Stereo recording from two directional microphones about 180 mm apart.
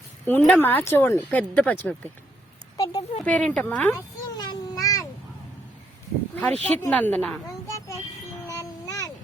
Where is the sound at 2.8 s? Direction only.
25° left (ahead or behind).